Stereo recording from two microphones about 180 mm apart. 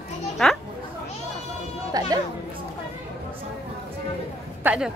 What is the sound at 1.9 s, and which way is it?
Chatter, 20° right (ahead or behind).